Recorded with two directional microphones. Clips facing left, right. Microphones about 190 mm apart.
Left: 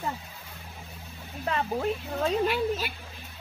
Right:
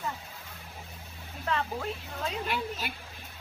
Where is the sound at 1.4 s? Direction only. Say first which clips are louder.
Left 3 dB; 20° left (ahead or behind).